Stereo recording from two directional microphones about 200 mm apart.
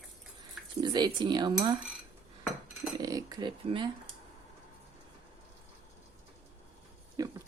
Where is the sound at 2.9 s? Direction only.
20° right (ahead or behind).